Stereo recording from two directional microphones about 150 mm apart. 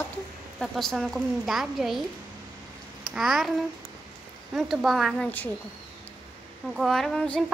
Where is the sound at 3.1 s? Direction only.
Centre (ahead or behind).